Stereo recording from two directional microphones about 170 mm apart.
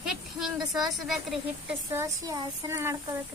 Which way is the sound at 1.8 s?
20° right (ahead or behind).